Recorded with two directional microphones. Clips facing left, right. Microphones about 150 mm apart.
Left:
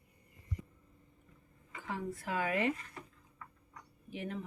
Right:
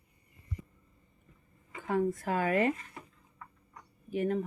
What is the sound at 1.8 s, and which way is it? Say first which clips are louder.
Speech: right 10 dB; 50° right (ahead or behind).